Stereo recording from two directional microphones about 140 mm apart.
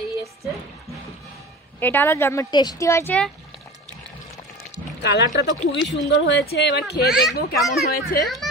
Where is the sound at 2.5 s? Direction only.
30° left (ahead or behind).